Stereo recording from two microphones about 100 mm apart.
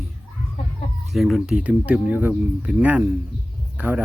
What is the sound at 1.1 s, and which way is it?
Speech, centre (ahead or behind).